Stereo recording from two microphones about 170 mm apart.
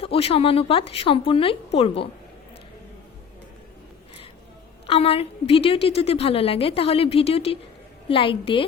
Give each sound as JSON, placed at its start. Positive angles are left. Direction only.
{"t": 0.0, "sound": "a woman's voice", "side_deg": 35}
{"t": 4.9, "sound": "a woman's voice", "side_deg": 35}